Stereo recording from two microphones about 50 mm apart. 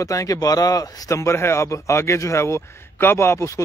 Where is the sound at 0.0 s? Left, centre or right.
Left.